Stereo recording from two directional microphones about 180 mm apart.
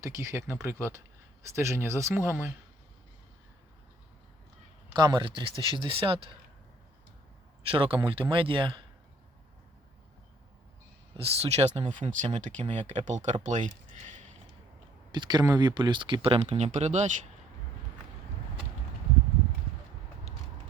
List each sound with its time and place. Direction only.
0.0 s speech: 15° right (ahead or behind)
4.9 s speech: 25° right (ahead or behind)
7.6 s speech: 30° right (ahead or behind)
11.2 s speech: 35° right (ahead or behind)
15.1 s speech: 25° right (ahead or behind); by 17.1 s 40° right (ahead or behind)